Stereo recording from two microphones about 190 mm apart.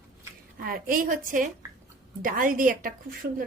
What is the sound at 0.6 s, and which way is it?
A woman's voice, 50° right (ahead or behind).